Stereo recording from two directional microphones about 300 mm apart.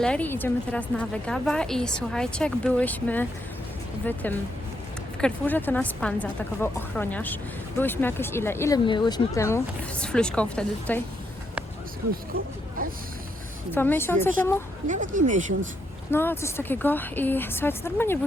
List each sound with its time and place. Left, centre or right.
0.0 s a woman's voice: centre
13.7 s speech: centre
14.8 s speech: right
16.1 s speech: centre